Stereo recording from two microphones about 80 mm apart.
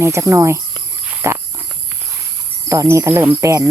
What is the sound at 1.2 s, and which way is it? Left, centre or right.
Cricket, right.